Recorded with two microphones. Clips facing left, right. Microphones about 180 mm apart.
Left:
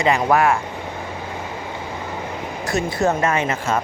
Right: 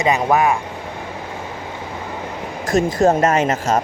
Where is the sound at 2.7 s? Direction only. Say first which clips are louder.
Right 5 dB; 45° right (ahead or behind).